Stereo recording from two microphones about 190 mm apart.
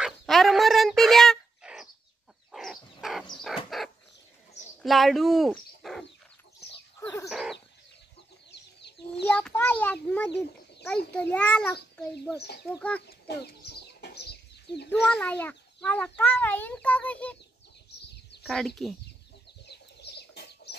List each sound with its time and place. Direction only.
0.0 s a sound: centre (ahead or behind)
2.5 s dog: centre (ahead or behind)
3.4 s wild animals: centre (ahead or behind)
4.8 s bird: centre (ahead or behind)
7.2 s bird: centre (ahead or behind)
9.2 s a sound: 5° left (ahead or behind)
10.0 s a child's voice: 10° left (ahead or behind)
12.4 s speech: 60° left (ahead or behind)
13.4 s chicken: 60° left (ahead or behind)
14.9 s a child's voice: 5° left (ahead or behind)
18.4 s a sound: centre (ahead or behind)
19.6 s chicken: 60° left (ahead or behind)